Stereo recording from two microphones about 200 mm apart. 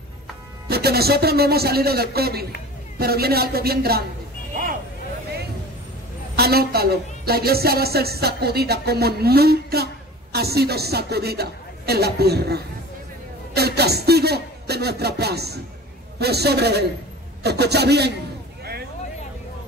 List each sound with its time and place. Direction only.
0.7 s a woman's voice: 50° right (ahead or behind)
6.3 s a woman's voice: 50° right (ahead or behind)
18.6 s a sound: 50° right (ahead or behind)